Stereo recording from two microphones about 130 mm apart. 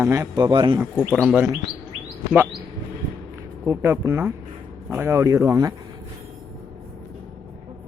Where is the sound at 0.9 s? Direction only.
10° left (ahead or behind).